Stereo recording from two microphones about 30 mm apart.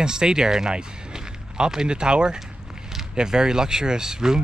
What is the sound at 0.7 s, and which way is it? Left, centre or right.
Music, right.